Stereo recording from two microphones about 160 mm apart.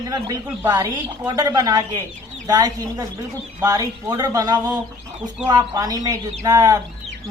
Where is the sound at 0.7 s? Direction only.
25° right (ahead or behind).